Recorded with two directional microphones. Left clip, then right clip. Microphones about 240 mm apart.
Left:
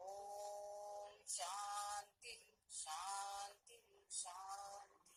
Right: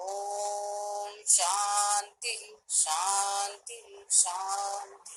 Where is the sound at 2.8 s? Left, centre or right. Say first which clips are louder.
Right 18 dB; right.